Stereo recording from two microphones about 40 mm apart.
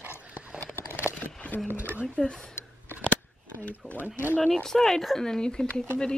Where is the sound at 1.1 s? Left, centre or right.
Left.